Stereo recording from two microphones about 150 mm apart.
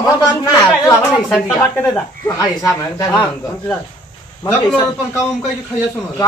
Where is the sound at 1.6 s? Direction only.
15° left (ahead or behind).